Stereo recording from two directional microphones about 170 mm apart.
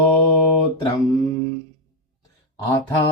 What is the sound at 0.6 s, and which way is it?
Mantra, 25° left (ahead or behind).